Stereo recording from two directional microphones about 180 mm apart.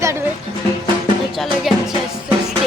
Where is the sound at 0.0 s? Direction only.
15° right (ahead or behind).